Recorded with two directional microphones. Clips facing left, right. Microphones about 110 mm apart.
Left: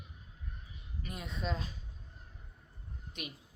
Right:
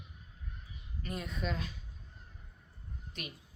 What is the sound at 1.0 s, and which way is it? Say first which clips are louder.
Speech: right 4 dB; 10° left (ahead or behind).